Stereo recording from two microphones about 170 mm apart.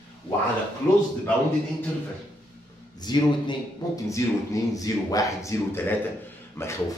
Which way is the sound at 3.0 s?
25° left (ahead or behind).